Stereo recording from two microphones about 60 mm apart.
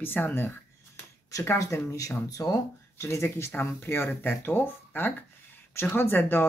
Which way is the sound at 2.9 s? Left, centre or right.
Left.